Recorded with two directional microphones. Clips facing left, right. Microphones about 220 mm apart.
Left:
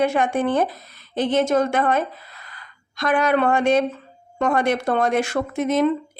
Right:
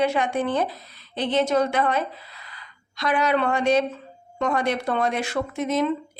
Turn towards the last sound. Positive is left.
turn(degrees=50)  # may be behind; listen again after turning